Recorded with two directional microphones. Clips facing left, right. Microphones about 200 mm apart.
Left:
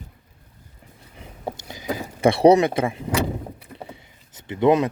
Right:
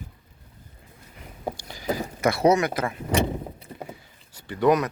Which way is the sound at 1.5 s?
20° left (ahead or behind).